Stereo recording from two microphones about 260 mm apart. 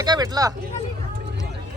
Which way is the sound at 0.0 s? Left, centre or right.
Centre.